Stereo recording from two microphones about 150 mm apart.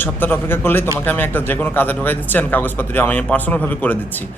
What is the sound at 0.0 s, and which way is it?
A man's voice, 15° left (ahead or behind).